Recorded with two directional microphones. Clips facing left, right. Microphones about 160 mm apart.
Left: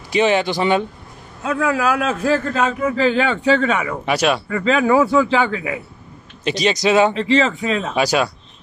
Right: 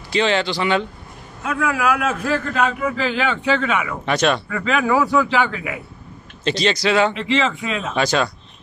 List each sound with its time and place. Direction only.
0.1 s speech: 15° left (ahead or behind)
1.4 s a man's voice: 30° left (ahead or behind)
4.0 s speech: 10° left (ahead or behind)
4.5 s speech: 35° left (ahead or behind)
6.4 s speech: 15° left (ahead or behind)
7.2 s a man's voice: 35° left (ahead or behind)
7.9 s speech: 10° left (ahead or behind)